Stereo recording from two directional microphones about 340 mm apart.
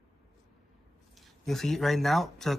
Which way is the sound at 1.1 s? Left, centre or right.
Centre.